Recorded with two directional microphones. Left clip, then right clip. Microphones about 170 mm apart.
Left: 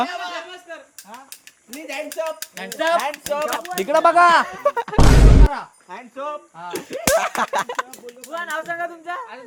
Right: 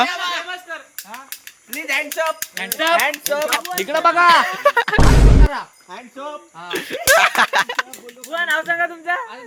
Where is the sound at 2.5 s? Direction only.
30° left (ahead or behind).